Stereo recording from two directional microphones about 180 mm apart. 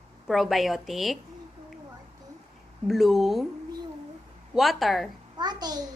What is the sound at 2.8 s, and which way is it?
Speech, centre (ahead or behind).